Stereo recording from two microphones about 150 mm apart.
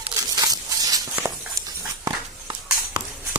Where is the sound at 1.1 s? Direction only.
15° right (ahead or behind).